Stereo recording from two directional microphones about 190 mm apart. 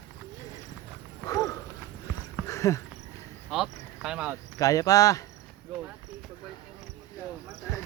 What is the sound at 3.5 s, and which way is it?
Cricket, centre (ahead or behind).